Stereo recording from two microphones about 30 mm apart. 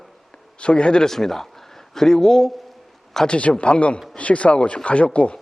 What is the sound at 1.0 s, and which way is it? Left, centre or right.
A man's voice, centre.